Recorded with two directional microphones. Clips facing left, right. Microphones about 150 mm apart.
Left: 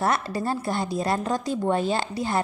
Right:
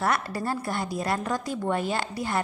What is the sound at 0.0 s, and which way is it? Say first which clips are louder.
A woman's voice: left 2 dB; 25° left (ahead or behind).